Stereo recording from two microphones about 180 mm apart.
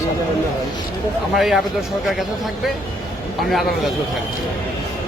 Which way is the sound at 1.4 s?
Centre (ahead or behind).